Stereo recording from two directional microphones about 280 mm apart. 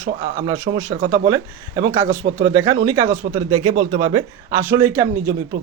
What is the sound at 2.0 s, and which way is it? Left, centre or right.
Speech, right.